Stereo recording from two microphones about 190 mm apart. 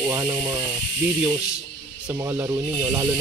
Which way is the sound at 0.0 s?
15° right (ahead or behind).